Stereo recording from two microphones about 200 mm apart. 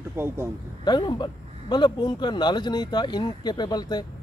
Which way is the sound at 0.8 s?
20° left (ahead or behind).